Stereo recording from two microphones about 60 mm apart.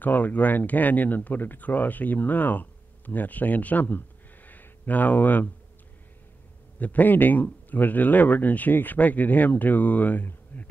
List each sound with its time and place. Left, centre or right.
0.0 s speech: left
6.8 s speech: left